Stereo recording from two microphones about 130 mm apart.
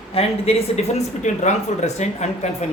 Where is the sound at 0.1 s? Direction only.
50° left (ahead or behind).